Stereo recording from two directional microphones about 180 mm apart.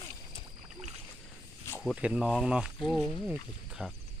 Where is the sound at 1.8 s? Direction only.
5° right (ahead or behind).